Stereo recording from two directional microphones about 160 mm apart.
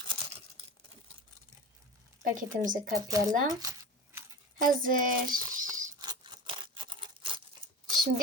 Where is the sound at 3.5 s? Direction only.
20° right (ahead or behind).